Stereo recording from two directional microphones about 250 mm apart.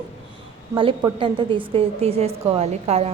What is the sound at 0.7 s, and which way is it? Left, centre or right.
A woman's voice, centre.